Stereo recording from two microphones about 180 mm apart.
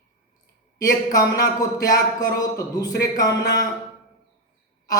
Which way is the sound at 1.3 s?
20° left (ahead or behind).